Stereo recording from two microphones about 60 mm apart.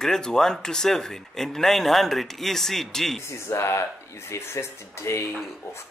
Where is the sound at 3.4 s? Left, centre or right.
Left.